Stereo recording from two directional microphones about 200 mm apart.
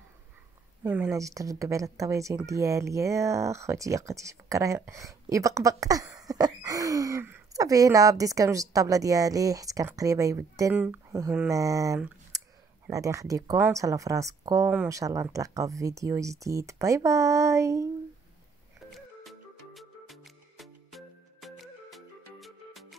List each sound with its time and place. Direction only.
0.8 s speech: 10° right (ahead or behind)
18.9 s music: centre (ahead or behind)